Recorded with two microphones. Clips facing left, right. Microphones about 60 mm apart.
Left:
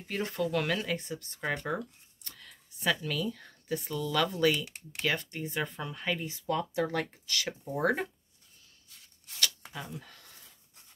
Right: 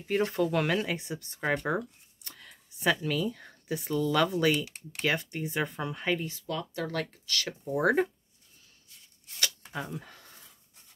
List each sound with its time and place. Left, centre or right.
0.1 s speech: centre
6.2 s speech: left
7.6 s speech: centre
9.4 s a sound: centre